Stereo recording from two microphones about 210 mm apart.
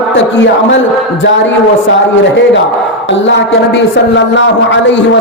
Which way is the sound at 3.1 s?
55° left (ahead or behind).